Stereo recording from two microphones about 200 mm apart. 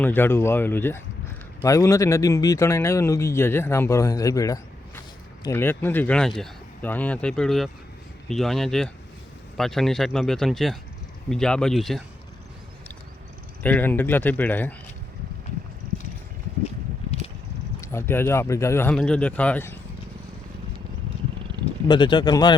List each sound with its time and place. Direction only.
0.0 s speech: 10° left (ahead or behind)
13.6 s speech: 10° left (ahead or behind)
17.7 s speech: 10° left (ahead or behind)
21.8 s speech: 25° left (ahead or behind)